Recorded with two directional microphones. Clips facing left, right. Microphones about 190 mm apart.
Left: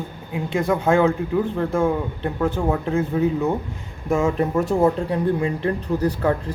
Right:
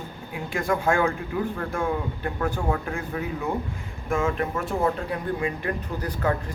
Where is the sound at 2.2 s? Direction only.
20° left (ahead or behind).